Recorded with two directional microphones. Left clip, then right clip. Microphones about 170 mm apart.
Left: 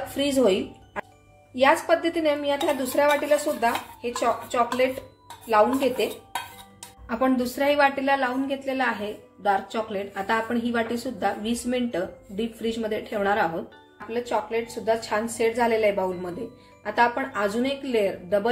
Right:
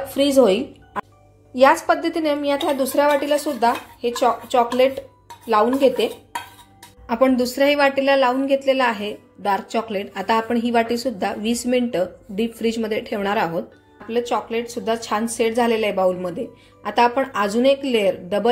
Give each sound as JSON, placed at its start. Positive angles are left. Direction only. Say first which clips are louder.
{"t": 0.1, "sound": "a woman's voice", "louder": "right 6 dB", "side_deg": -35}
{"t": 7.1, "sound": "a woman's voice", "louder": "right 6 dB", "side_deg": -40}